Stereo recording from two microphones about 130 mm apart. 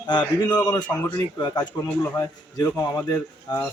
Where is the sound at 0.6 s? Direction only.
25° left (ahead or behind).